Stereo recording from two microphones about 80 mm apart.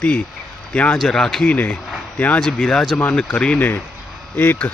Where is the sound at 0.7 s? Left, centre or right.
Centre.